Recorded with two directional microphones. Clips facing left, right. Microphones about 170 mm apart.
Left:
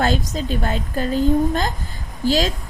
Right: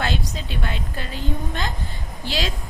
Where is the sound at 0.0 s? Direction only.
40° left (ahead or behind).